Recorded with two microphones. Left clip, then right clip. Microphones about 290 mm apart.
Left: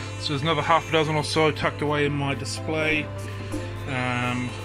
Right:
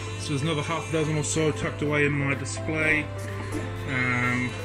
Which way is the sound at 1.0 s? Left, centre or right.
Left.